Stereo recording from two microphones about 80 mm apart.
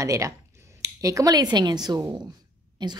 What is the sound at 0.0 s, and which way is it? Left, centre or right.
A woman's voice, right.